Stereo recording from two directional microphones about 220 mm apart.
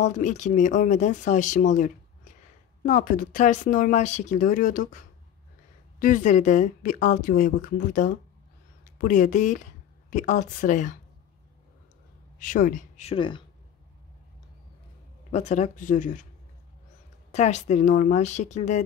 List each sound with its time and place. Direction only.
0.0 s a woman's voice: 35° left (ahead or behind)
12.4 s a woman's voice: 35° left (ahead or behind)
15.3 s a woman's voice: 30° left (ahead or behind)
17.3 s a woman's voice: 30° left (ahead or behind)